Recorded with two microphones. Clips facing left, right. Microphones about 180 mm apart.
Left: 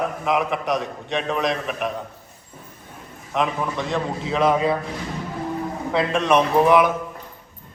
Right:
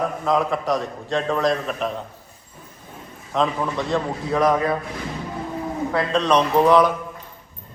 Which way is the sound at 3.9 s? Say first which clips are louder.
Right 2 dB; 20° left (ahead or behind).